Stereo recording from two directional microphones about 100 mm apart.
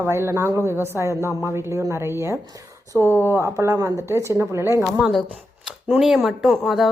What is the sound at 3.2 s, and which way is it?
Speech, 25° right (ahead or behind).